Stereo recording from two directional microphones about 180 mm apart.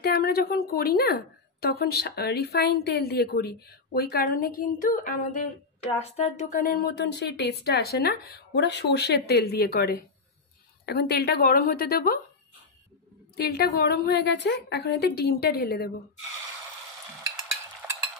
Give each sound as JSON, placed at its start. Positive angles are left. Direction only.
{"t": 0.0, "sound": "speech", "side_deg": 60}
{"t": 13.4, "sound": "speech", "side_deg": 60}
{"t": 17.8, "sound": "stir", "side_deg": -15}